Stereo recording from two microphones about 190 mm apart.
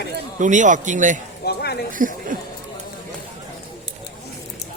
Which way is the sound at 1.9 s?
45° right (ahead or behind).